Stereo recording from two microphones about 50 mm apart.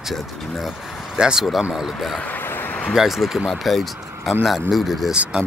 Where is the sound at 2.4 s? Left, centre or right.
Left.